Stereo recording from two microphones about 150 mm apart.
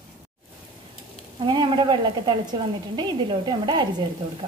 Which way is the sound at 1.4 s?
30° right (ahead or behind).